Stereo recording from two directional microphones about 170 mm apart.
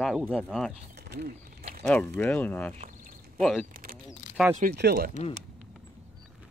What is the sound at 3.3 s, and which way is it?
Speech, centre (ahead or behind).